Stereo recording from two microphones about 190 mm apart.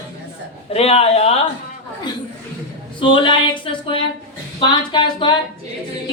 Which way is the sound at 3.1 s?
25° left (ahead or behind).